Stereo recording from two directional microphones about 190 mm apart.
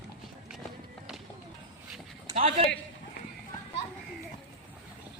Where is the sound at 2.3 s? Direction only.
35° right (ahead or behind).